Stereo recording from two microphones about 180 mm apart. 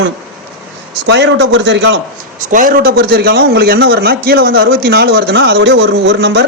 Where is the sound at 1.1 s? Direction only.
75° right (ahead or behind); by 2.0 s 90° right.